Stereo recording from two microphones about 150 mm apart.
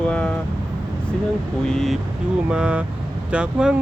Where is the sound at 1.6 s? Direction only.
5° left (ahead or behind).